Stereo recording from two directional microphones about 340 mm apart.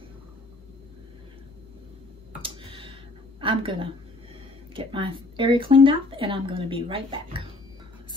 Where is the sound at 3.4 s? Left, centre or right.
Centre.